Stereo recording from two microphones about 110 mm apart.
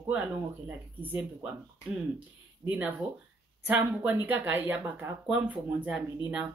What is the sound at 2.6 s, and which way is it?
Speech, 15° right (ahead or behind).